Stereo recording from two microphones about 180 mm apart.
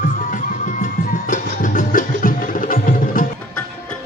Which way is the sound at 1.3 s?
45° left (ahead or behind).